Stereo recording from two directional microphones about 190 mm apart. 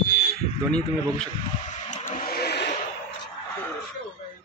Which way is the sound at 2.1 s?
50° left (ahead or behind).